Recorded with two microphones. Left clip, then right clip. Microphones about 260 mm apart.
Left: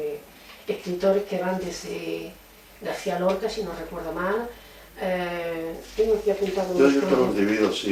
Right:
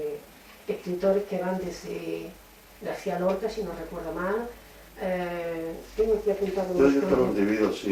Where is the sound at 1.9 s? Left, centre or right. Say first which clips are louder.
Left 2 dB; left.